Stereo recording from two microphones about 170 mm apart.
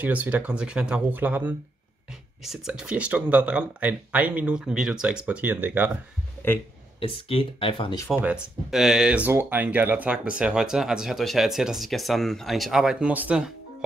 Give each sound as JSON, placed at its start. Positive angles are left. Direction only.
{"t": 0.0, "sound": "speech", "side_deg": -10}
{"t": 7.0, "sound": "speech", "side_deg": 35}
{"t": 8.2, "sound": "speech", "side_deg": -5}